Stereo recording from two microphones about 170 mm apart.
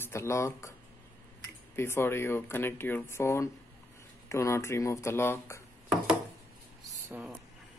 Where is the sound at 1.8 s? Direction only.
15° left (ahead or behind).